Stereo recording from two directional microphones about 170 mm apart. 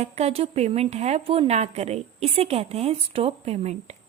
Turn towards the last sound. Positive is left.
turn(degrees=-35)  # may be behind; listen again after turning